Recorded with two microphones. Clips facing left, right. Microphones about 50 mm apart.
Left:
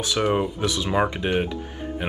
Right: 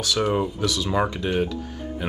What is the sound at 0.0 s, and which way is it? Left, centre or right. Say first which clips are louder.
Speech: even; left.